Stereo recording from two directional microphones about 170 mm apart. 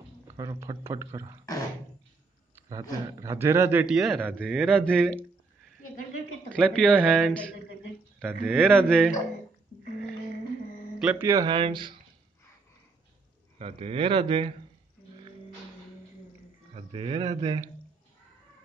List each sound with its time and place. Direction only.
0.4 s a man's voice: 20° right (ahead or behind)
2.5 s a man's voice: 20° right (ahead or behind); by 5.2 s 5° left (ahead or behind)
6.5 s speech: 5° left (ahead or behind)
6.9 s speech: 5° right (ahead or behind)
8.2 s a man's voice: 5° right (ahead or behind)
8.5 s speech: 5° left (ahead or behind)
11.0 s a man's voice: 10° right (ahead or behind); by 11.9 s 30° right (ahead or behind)
13.6 s speech: 35° right (ahead or behind)
16.7 s speech: 30° right (ahead or behind)